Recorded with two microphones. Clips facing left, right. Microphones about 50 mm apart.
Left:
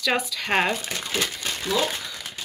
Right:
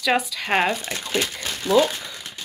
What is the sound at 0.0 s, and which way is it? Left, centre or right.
Speech, centre.